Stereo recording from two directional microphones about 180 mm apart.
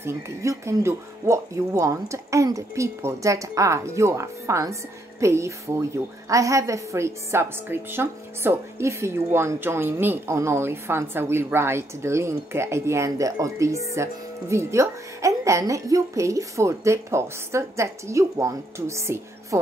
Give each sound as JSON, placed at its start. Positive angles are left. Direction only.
{"t": 0.0, "sound": "a woman's voice", "side_deg": -15}